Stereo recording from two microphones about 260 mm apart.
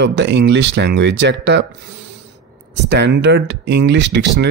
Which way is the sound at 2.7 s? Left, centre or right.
Right.